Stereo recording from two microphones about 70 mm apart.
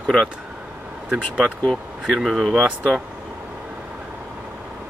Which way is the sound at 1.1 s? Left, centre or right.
Centre.